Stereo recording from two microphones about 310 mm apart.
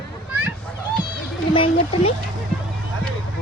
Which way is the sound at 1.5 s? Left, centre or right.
Centre.